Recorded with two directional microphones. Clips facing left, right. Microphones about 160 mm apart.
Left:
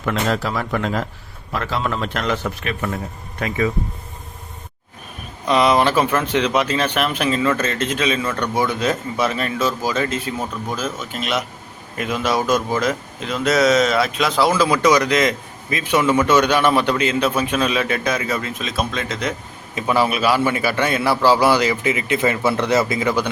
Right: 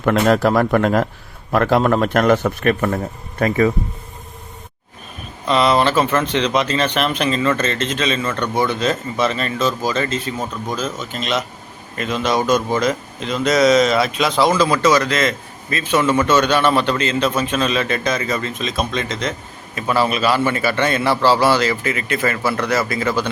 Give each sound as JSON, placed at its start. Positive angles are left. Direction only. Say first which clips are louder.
{"t": 0.0, "sound": "a man's voice", "louder": "right 7 dB", "side_deg": -55}
{"t": 5.5, "sound": "speech", "louder": "even", "side_deg": 10}